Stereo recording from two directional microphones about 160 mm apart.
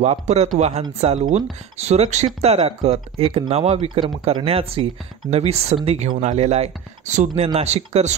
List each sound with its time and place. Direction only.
0.0 s speech: 40° right (ahead or behind)